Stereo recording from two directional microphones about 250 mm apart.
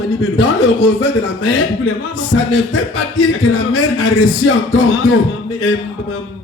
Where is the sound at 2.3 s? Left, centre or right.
Left.